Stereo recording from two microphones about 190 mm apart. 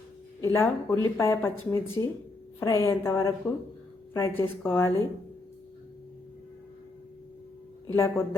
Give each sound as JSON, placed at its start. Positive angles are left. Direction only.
{"t": 0.4, "sound": "speech", "side_deg": 15}
{"t": 7.9, "sound": "speech", "side_deg": 15}